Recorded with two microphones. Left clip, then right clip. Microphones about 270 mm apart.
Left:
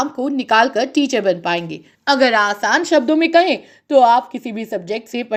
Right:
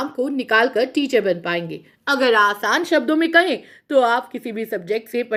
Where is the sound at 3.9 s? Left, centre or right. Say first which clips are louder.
Left 5 dB; left.